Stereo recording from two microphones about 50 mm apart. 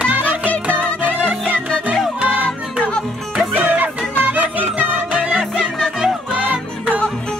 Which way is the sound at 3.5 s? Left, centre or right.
Right.